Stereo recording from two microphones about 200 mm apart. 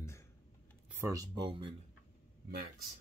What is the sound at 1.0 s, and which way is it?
Speech, 20° right (ahead or behind).